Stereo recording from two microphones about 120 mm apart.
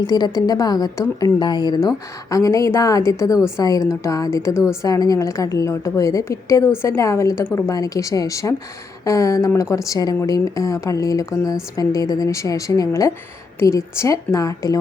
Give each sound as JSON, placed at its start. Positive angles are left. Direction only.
{"t": 0.1, "sound": "a woman's voice", "side_deg": 35}
{"t": 4.5, "sound": "a woman's voice", "side_deg": -5}
{"t": 4.8, "sound": "a woman's voice", "side_deg": 30}